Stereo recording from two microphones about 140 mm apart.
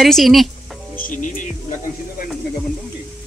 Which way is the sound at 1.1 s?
70° left (ahead or behind).